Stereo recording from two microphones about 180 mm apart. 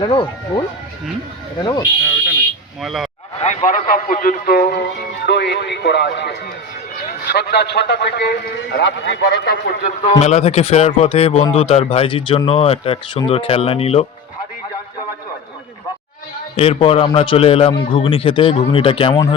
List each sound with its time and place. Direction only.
0.0 s speech: 25° left (ahead or behind)
1.6 s speech: 25° left (ahead or behind)
2.8 s speech: centre (ahead or behind)
3.4 s a man's voice: 40° left (ahead or behind)
5.2 s a man's voice: 70° left (ahead or behind)
10.0 s a man's voice: 40° left (ahead or behind)
16.6 s a man's voice: 35° left (ahead or behind)